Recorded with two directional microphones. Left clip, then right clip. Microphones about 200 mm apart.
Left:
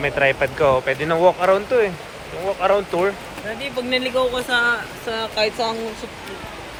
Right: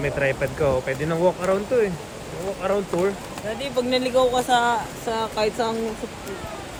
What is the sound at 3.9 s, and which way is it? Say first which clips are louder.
Speech: even; 55° right (ahead or behind).